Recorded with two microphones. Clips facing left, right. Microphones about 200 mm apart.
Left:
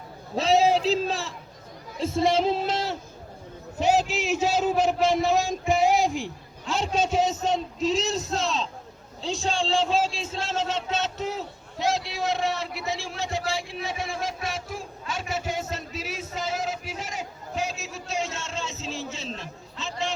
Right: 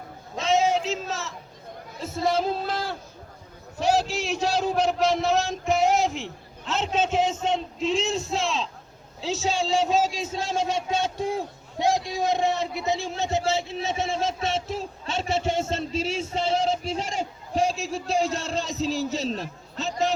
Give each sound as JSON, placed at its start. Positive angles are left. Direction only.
{"t": 0.3, "sound": "a man's voice", "side_deg": 35}
{"t": 3.8, "sound": "a sound", "side_deg": 20}
{"t": 4.7, "sound": "a man's voice", "side_deg": 0}
{"t": 5.3, "sound": "music", "side_deg": 0}
{"t": 6.7, "sound": "a man's voice", "side_deg": 10}
{"t": 9.2, "sound": "a sound", "side_deg": -5}